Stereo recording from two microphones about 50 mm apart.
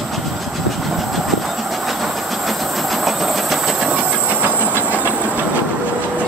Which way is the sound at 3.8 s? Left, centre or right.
Right.